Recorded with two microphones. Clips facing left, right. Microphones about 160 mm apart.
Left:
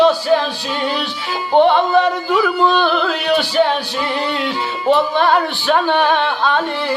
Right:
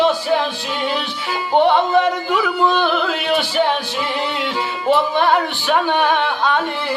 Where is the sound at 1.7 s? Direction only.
20° right (ahead or behind).